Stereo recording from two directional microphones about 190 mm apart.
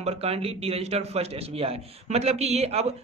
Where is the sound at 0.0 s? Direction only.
30° right (ahead or behind).